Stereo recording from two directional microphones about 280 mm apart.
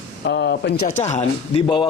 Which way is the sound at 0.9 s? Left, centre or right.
Left.